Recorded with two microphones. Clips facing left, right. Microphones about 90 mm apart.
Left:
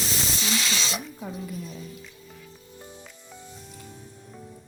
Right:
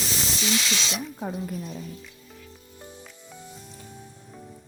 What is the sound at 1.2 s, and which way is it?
Speech, 40° right (ahead or behind).